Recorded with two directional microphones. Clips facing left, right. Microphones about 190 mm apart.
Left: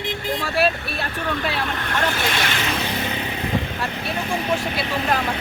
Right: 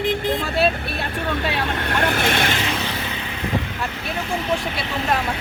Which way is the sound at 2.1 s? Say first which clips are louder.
Right 3 dB; 55° right (ahead or behind).